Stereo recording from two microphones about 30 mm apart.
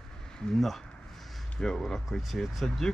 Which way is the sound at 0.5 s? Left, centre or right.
Centre.